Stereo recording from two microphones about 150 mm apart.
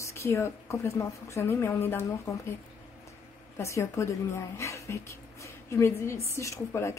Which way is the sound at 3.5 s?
20° left (ahead or behind).